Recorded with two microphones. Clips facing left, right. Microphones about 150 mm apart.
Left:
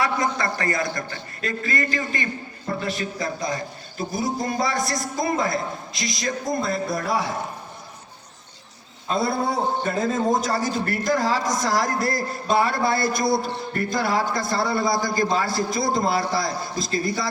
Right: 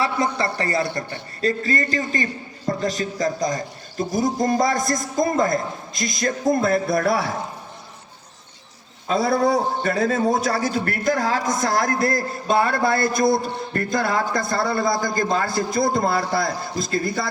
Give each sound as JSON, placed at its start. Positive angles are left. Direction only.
{"t": 0.0, "sound": "a man's voice", "side_deg": -30}
{"t": 9.0, "sound": "a man's voice", "side_deg": -80}